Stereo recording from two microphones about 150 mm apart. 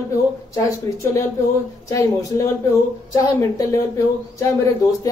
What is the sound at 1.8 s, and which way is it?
A woman's voice, 20° left (ahead or behind).